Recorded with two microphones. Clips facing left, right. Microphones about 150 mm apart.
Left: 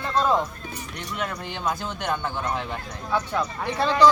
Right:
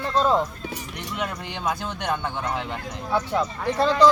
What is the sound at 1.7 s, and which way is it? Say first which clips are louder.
Speech: right 1 dB; 15° right (ahead or behind).